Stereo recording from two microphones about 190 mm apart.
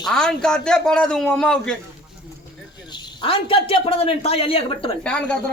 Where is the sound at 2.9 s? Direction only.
25° left (ahead or behind).